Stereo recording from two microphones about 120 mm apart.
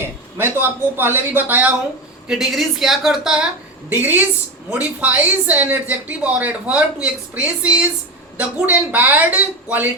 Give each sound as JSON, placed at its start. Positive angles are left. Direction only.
{"t": 0.0, "sound": "a sound", "side_deg": -20}
{"t": 0.9, "sound": "speech", "side_deg": -15}
{"t": 2.2, "sound": "a woman's voice", "side_deg": -5}
{"t": 3.8, "sound": "speech", "side_deg": -15}